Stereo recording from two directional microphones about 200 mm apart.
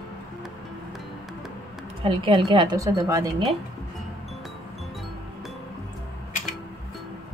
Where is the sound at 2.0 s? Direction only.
25° right (ahead or behind).